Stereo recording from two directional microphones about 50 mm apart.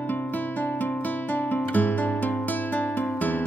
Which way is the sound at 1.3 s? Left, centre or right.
Left.